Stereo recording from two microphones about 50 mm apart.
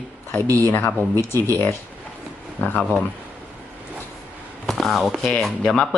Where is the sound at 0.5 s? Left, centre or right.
Left.